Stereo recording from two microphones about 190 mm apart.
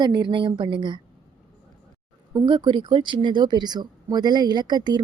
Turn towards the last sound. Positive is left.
turn(degrees=-20)  # may be behind; listen again after turning